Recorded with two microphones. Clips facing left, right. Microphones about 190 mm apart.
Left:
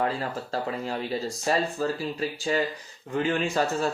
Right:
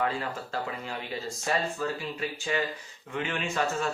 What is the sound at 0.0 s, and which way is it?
Speech, 35° left (ahead or behind).